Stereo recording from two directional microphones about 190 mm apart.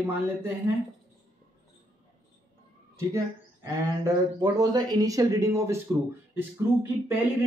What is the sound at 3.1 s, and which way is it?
Speech, 15° right (ahead or behind).